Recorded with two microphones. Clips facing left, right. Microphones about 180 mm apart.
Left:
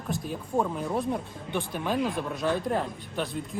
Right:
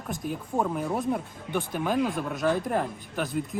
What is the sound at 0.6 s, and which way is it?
Speech, 5° right (ahead or behind).